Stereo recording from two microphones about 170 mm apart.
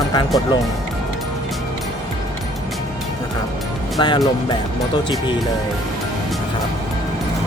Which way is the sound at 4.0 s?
30° left (ahead or behind).